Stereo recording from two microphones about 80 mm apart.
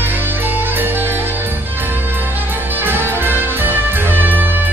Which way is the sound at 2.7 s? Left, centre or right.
Right.